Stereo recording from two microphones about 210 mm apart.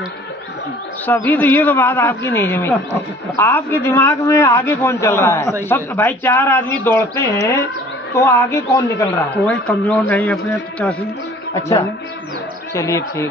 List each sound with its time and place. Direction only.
1.0 s a man's voice: 10° left (ahead or behind)
12.7 s a man's voice: 15° left (ahead or behind)